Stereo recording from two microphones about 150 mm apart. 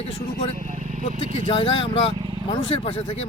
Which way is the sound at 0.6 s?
55° right (ahead or behind).